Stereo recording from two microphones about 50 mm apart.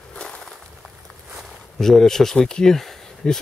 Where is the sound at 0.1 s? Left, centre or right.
Left.